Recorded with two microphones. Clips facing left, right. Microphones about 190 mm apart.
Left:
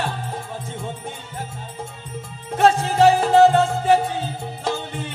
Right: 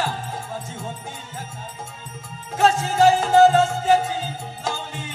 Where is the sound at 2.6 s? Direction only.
65° left (ahead or behind).